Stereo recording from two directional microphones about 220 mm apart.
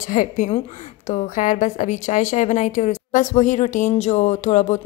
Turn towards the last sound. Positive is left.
turn(degrees=35)  # may be behind; listen again after turning